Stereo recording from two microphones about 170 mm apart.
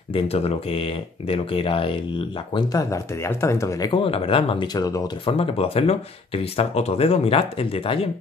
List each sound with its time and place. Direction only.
0.1 s speech: 35° left (ahead or behind)
2.5 s speech: 20° left (ahead or behind)
5.3 s speech: 35° left (ahead or behind)